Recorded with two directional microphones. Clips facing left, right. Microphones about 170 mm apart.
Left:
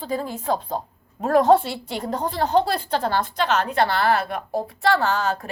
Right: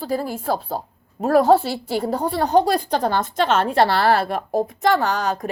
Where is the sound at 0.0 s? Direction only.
10° right (ahead or behind).